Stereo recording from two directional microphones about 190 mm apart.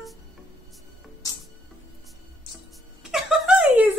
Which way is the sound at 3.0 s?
Centre (ahead or behind).